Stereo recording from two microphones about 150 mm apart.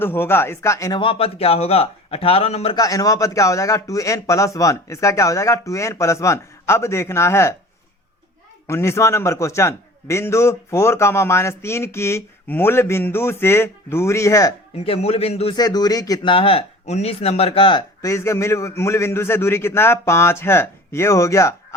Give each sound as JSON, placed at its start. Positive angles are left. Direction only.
{"t": 0.0, "sound": "a man's voice", "side_deg": 15}
{"t": 0.9, "sound": "speech", "side_deg": 40}
{"t": 2.7, "sound": "speech", "side_deg": 25}
{"t": 8.6, "sound": "a man's voice", "side_deg": 15}
{"t": 14.8, "sound": "speech", "side_deg": 45}
{"t": 15.5, "sound": "speech", "side_deg": 25}
{"t": 18.0, "sound": "a man's voice", "side_deg": 20}